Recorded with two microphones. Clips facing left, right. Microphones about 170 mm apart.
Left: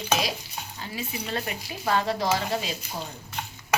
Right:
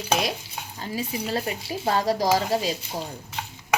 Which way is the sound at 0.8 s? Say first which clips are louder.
Right 5 dB; 35° right (ahead or behind).